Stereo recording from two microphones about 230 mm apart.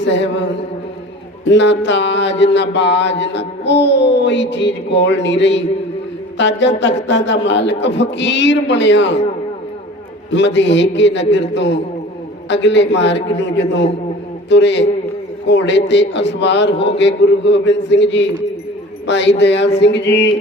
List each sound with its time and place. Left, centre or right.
0.0 s mantra: left
10.3 s mantra: left